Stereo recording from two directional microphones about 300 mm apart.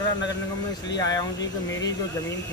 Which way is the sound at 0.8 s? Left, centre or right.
Centre.